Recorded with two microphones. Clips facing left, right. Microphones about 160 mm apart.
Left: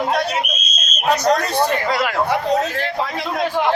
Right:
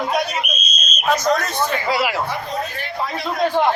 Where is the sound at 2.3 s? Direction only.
80° left.